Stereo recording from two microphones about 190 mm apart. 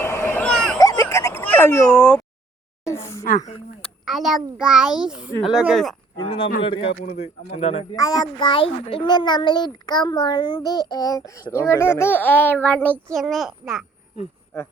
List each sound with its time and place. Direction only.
0.0 s a sound: 10° left (ahead or behind)
0.8 s a sound: 15° left (ahead or behind)
2.8 s speech: 15° left (ahead or behind)
3.2 s speech: 40° left (ahead or behind)
4.0 s a child's voice: centre (ahead or behind)
6.1 s speech: 25° left (ahead or behind)
7.9 s a child's voice: 20° left (ahead or behind); by 13.8 s centre (ahead or behind)